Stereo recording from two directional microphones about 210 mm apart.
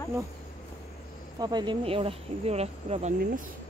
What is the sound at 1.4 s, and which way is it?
Speech, 20° right (ahead or behind).